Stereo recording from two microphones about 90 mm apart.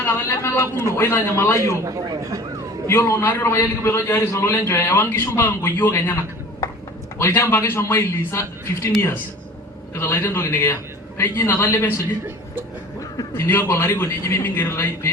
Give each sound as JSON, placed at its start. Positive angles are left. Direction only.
{"t": 0.0, "sound": "a man's voice", "side_deg": 30}
{"t": 1.7, "sound": "a man's voice", "side_deg": -35}
{"t": 2.8, "sound": "a man's voice", "side_deg": 30}
{"t": 7.2, "sound": "a man's voice", "side_deg": 30}
{"t": 13.3, "sound": "a man's voice", "side_deg": 25}